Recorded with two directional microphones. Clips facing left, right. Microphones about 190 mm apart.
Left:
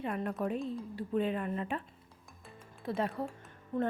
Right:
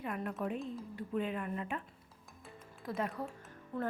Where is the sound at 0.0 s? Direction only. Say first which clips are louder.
Left 3 dB; 35° left (ahead or behind).